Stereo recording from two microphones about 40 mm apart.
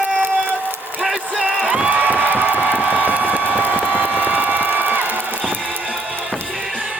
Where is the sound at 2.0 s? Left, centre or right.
Right.